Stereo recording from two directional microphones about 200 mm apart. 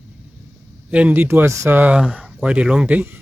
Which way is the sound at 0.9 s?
5° right (ahead or behind).